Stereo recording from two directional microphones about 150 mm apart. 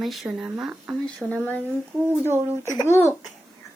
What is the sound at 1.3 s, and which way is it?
Speech, 10° left (ahead or behind).